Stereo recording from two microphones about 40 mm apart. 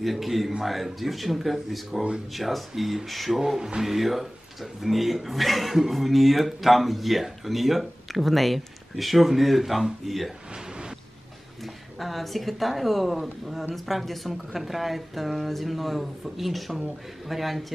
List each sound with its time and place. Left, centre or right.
0.0 s speech: centre
3.3 s speech: centre
10.5 s a sound: right
11.6 s speech: centre